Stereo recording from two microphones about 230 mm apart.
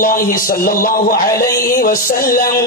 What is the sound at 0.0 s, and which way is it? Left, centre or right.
Mantra, left.